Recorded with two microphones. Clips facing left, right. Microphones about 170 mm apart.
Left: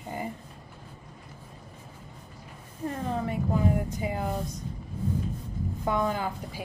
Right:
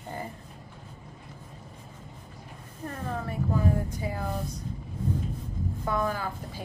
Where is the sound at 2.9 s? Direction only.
20° left (ahead or behind).